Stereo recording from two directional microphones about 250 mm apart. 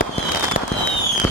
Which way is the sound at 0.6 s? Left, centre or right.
Left.